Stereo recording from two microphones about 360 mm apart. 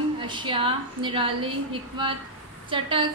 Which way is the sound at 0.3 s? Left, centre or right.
Centre.